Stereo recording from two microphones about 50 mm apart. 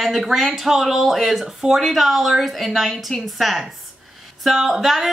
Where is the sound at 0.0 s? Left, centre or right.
Centre.